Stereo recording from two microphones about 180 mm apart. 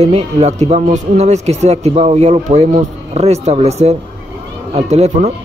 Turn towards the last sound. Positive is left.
turn(degrees=-35)  # may be behind; listen again after turning